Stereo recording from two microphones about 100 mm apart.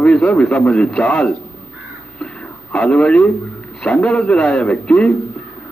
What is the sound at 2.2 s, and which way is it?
Radio, 10° left (ahead or behind).